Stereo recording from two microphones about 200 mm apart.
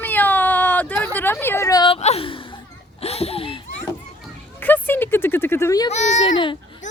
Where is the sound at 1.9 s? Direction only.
30° left (ahead or behind).